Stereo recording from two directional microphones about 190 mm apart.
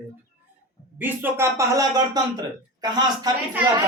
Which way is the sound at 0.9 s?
10° right (ahead or behind).